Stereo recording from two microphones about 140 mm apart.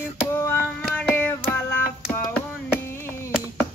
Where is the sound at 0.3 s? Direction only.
20° left (ahead or behind).